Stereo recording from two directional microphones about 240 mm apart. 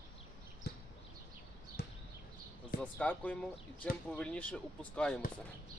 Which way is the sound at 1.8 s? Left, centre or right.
Left.